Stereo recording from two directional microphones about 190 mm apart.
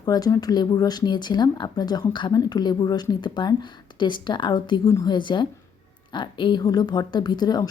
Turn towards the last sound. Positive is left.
turn(degrees=20)  # may be behind; listen again after turning